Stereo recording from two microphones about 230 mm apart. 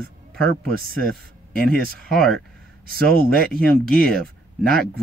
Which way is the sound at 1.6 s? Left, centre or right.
Right.